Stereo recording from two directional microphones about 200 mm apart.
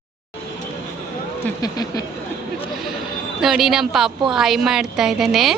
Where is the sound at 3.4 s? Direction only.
Centre (ahead or behind).